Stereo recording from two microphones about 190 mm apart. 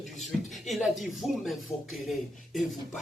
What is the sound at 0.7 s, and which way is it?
Speech, centre (ahead or behind).